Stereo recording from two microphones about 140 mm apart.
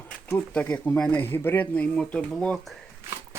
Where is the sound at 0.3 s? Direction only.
10° left (ahead or behind).